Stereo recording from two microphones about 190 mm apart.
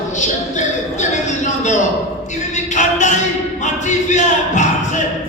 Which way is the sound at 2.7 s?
40° left (ahead or behind).